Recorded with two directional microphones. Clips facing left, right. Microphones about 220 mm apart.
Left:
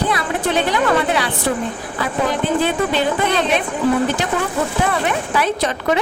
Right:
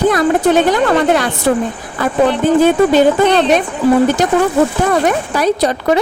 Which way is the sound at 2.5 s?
45° right (ahead or behind).